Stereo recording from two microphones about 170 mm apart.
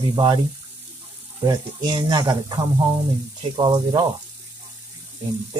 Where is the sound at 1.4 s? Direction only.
25° right (ahead or behind).